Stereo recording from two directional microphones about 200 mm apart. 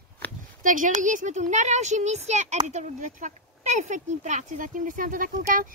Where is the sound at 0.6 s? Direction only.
40° right (ahead or behind).